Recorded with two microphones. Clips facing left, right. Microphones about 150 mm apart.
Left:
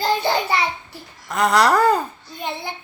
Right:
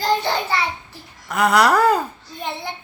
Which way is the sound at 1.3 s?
5° right (ahead or behind).